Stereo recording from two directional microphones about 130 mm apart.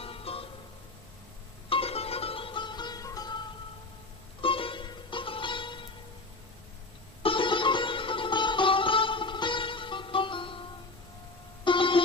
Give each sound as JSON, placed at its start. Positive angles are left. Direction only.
{"t": 0.0, "sound": "music", "side_deg": 45}
{"t": 1.7, "sound": "music", "side_deg": 50}
{"t": 4.4, "sound": "music", "side_deg": 45}
{"t": 7.2, "sound": "music", "side_deg": 40}
{"t": 11.6, "sound": "music", "side_deg": 40}